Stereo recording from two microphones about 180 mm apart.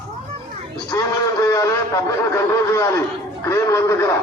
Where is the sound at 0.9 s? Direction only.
15° left (ahead or behind).